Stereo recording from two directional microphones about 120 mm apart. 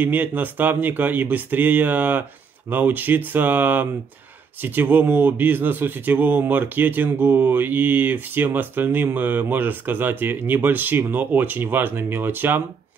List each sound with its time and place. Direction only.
0.0 s speech: 15° right (ahead or behind)